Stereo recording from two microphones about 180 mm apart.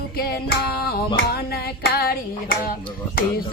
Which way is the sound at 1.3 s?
60° left (ahead or behind).